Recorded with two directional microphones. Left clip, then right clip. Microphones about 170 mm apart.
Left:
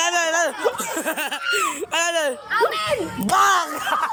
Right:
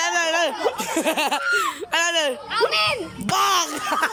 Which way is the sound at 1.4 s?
5° left (ahead or behind).